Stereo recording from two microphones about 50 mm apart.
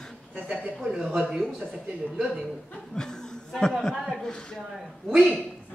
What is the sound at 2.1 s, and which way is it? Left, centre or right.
Speech, centre.